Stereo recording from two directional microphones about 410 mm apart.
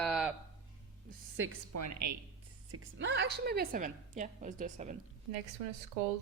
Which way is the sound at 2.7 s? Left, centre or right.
Right.